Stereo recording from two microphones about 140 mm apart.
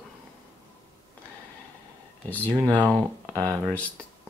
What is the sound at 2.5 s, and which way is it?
Speech, 25° right (ahead or behind).